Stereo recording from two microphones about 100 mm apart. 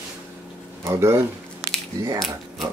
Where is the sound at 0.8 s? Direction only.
30° right (ahead or behind).